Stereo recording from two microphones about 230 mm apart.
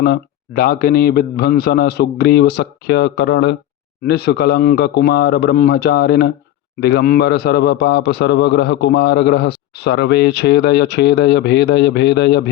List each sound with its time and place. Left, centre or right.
0.0 s a man's voice: left